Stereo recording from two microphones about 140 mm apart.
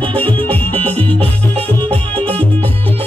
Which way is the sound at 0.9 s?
45° right (ahead or behind).